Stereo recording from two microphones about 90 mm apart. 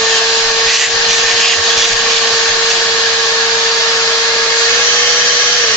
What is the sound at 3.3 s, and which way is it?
Vacuum cleaner, 35° left (ahead or behind).